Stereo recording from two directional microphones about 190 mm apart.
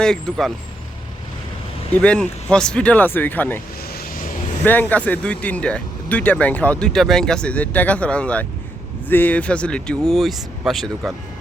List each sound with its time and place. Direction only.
0.0 s speech: 5° left (ahead or behind)
1.9 s speech: 5° left (ahead or behind)
3.9 s vehicle: 45° left (ahead or behind)
4.6 s speech: 10° left (ahead or behind)